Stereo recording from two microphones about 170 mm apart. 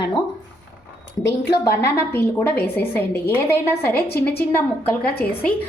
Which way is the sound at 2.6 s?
15° left (ahead or behind).